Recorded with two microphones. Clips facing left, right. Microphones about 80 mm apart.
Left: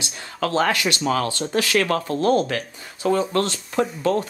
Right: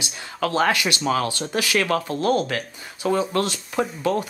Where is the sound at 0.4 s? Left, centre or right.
Centre.